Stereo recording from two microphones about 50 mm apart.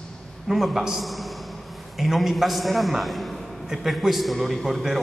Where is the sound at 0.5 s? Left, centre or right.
Centre.